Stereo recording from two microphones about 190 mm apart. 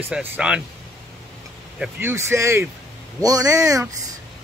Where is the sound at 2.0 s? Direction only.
15° right (ahead or behind).